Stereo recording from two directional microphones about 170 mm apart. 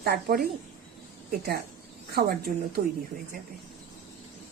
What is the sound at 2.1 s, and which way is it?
Speech, 65° right (ahead or behind).